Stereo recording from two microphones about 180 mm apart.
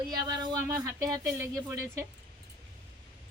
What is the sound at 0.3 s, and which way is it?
Speech, 20° right (ahead or behind).